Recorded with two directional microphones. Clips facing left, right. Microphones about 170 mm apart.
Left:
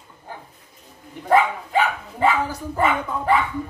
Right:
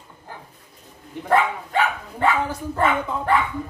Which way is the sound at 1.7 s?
5° left (ahead or behind).